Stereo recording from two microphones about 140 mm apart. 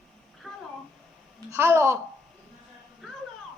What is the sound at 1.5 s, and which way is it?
Speech, 15° right (ahead or behind).